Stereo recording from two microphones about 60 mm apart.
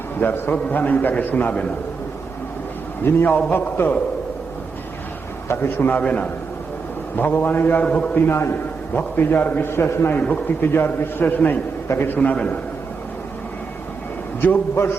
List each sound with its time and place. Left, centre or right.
0.2 s a man's voice: left
3.0 s a man's voice: left
3.2 s a man's voice: left
5.5 s a man's voice: left
6.0 s a man's voice: left
7.2 s a man's voice: left
7.9 s a man's voice: centre
8.1 s a man's voice: left
9.0 s a man's voice: left
10.2 s a man's voice: left